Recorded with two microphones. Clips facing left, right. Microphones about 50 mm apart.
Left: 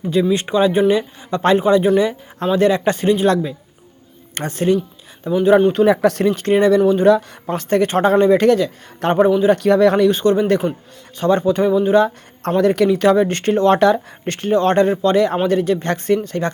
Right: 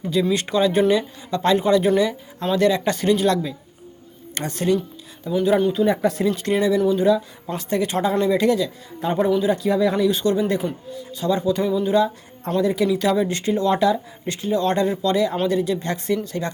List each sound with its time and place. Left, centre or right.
0.4 s speech: left
1.6 s speech: left
5.7 s speech: left
6.2 s speech: left
9.0 s a man's voice: left
9.5 s speech: left
10.1 s speech: left
12.5 s speech: left